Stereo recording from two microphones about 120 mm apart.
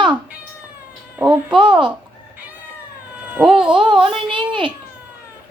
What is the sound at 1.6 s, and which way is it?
Speech, 40° right (ahead or behind).